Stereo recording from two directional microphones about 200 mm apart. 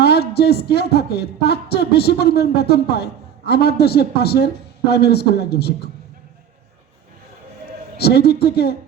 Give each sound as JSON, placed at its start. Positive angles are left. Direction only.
{"t": 0.0, "sound": "speech", "side_deg": 55}
{"t": 7.9, "sound": "speech", "side_deg": 55}